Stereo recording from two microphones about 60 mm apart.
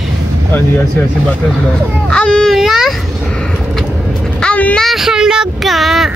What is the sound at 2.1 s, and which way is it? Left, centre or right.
Baby cry, centre.